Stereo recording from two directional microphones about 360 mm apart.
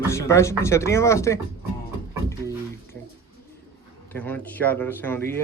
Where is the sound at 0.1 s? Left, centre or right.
Centre.